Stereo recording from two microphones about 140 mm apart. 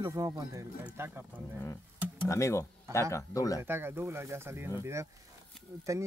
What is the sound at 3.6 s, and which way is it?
Speech, 15° right (ahead or behind).